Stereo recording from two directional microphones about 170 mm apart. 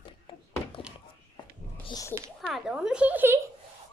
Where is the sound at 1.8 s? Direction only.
25° left (ahead or behind).